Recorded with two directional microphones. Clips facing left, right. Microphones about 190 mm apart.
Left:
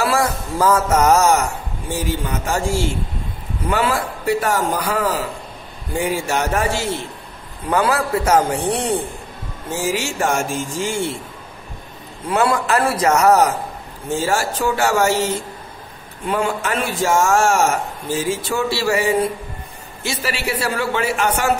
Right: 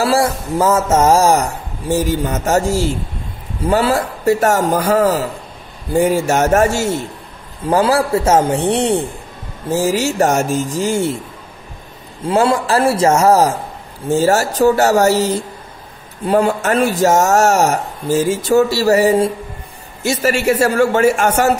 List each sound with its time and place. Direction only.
0.0 s a man's voice: 30° right (ahead or behind)
7.7 s a man's voice: 30° right (ahead or behind)
9.7 s speech: 40° right (ahead or behind)
12.3 s a man's voice: 30° right (ahead or behind)
14.1 s a man's voice: 40° right (ahead or behind)